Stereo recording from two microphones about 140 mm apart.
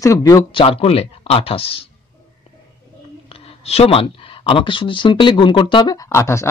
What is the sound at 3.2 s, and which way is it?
Speech, 45° left (ahead or behind).